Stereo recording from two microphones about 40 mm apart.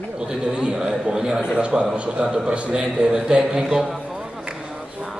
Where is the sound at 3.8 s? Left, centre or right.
Centre.